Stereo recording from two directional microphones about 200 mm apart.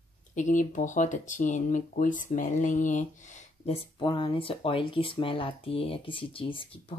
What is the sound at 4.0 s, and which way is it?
Speech, 25° left (ahead or behind).